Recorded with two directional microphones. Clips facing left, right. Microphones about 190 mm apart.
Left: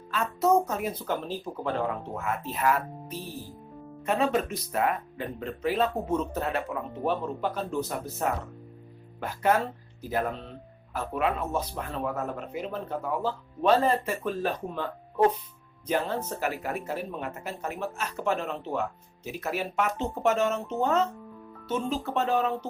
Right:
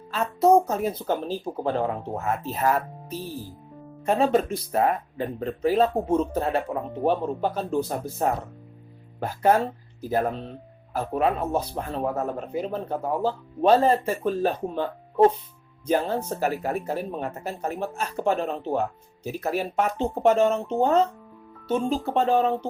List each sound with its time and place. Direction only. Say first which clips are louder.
0.1 s speech: right 5 dB; 30° right (ahead or behind)